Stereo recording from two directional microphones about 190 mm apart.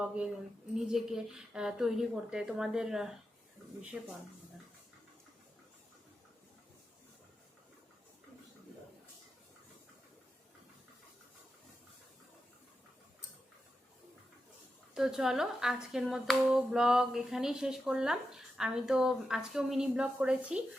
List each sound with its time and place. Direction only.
0.0 s speech: 5° right (ahead or behind)
14.9 s speech: 5° right (ahead or behind)